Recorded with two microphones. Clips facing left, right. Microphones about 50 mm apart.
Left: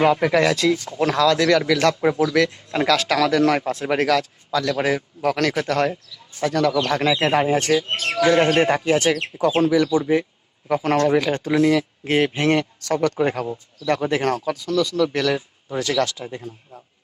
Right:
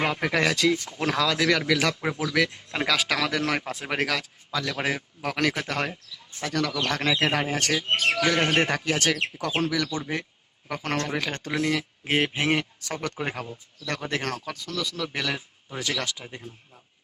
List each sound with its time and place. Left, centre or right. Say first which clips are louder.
0.0 s speech: left 7 dB; centre
6.4 s speech: left 8 dB; centre
7.3 s speech: left 8 dB; left
7.7 s speech: left 4 dB; centre
8.6 s speech: left 7 dB; left; by 13.5 s centre
13.8 s speech: left 9 dB; centre
15.8 s speech: left 8 dB; right